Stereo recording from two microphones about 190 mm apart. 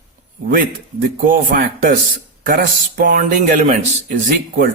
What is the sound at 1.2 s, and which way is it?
Speech, 45° right (ahead or behind).